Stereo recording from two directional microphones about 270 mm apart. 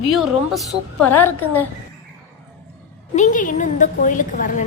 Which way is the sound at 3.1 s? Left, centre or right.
Left.